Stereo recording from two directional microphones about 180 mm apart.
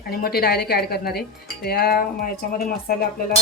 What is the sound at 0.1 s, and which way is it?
Speech, 60° left (ahead or behind).